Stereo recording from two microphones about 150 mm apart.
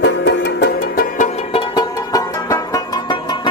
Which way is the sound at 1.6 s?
25° left (ahead or behind).